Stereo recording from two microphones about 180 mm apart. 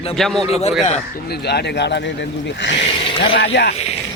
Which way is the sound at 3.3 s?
65° left (ahead or behind).